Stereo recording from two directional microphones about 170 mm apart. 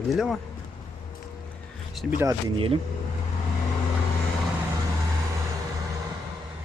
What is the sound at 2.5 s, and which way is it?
Speech, 35° right (ahead or behind).